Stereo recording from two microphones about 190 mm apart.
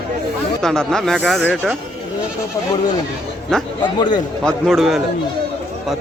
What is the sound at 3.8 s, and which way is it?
Speech, 25° left (ahead or behind).